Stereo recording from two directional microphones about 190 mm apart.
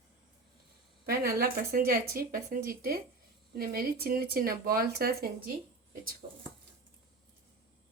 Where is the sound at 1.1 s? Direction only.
50° right (ahead or behind).